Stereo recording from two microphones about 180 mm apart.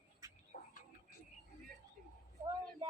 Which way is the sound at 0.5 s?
55° left (ahead or behind).